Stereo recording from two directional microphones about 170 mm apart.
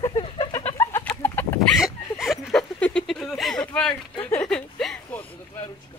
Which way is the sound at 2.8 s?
5° left (ahead or behind).